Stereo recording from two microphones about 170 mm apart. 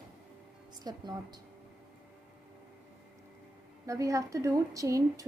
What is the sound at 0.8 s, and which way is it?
Speech, 25° right (ahead or behind).